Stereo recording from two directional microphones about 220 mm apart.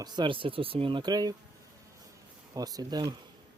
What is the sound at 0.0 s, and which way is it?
Speech, 20° right (ahead or behind).